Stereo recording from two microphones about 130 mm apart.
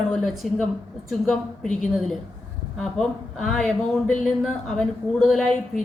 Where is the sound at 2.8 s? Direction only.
5° left (ahead or behind).